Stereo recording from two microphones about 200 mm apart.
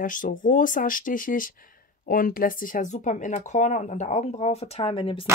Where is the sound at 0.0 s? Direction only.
40° left (ahead or behind).